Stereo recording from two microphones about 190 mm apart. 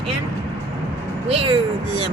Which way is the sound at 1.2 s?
30° right (ahead or behind).